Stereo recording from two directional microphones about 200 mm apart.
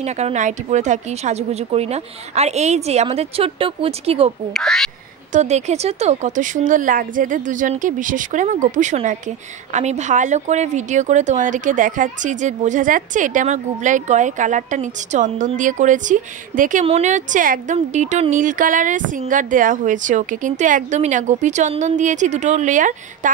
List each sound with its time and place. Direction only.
0.0 s a woman's voice: 35° right (ahead or behind)
4.6 s speech: centre (ahead or behind)
5.3 s a woman's voice: 35° right (ahead or behind)